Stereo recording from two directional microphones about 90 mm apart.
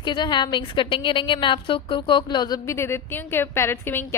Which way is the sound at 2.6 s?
30° left (ahead or behind).